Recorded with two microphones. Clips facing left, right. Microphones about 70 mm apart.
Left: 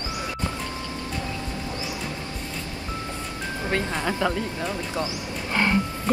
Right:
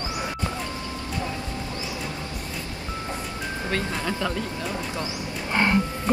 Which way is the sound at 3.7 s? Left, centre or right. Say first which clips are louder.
Left 2 dB; left.